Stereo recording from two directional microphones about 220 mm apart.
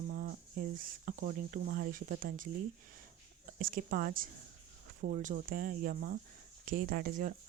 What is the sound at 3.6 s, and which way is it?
Speech, 40° right (ahead or behind).